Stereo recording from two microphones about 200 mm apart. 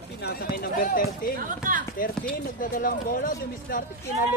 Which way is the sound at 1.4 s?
40° right (ahead or behind).